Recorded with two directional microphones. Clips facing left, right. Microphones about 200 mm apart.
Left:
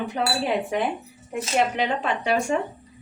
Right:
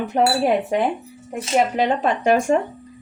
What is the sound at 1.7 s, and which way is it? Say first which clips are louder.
Speech: right 5 dB; 45° right (ahead or behind).